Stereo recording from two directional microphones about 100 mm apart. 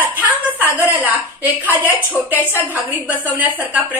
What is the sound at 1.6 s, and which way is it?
Speech, 15° right (ahead or behind).